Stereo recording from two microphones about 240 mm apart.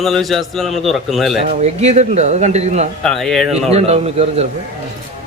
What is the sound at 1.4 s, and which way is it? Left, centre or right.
A man's voice, right.